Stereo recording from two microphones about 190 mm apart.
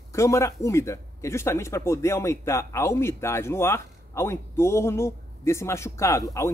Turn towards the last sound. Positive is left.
turn(degrees=15)  # may be behind; listen again after turning